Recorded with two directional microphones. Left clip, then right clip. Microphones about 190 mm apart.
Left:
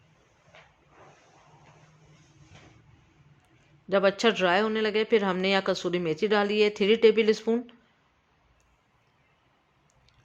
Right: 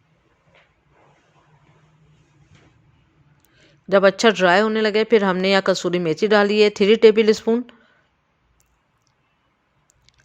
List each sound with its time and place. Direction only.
3.8 s a man's voice: 35° right (ahead or behind)